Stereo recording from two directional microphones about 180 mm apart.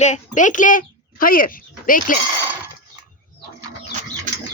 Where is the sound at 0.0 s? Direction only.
45° left (ahead or behind).